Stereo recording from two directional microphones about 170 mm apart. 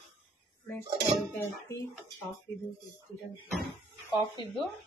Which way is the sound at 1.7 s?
15° left (ahead or behind).